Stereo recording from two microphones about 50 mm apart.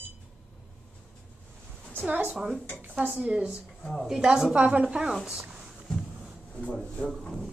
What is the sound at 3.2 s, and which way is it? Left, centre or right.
Speech, right.